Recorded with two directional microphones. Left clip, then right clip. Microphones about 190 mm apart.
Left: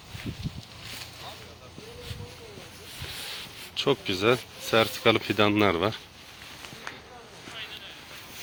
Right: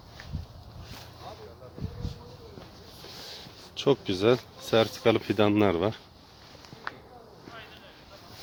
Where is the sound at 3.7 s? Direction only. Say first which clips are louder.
Even; 35° right (ahead or behind).